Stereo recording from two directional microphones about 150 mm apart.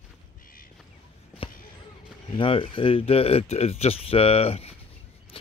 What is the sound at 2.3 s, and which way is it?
Speech, 35° left (ahead or behind).